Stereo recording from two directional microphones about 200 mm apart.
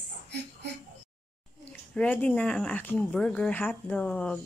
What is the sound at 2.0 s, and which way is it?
A woman's voice, 5° left (ahead or behind).